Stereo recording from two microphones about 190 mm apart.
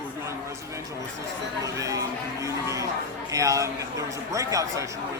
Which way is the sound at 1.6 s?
15° right (ahead or behind).